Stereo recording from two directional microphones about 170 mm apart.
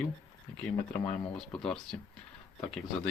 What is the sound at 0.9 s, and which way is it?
Speech, 5° left (ahead or behind).